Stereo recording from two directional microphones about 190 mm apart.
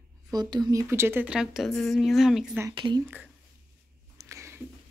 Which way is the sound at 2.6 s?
25° right (ahead or behind).